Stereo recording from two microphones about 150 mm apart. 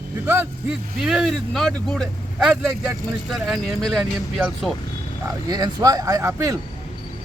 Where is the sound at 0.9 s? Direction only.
5° right (ahead or behind).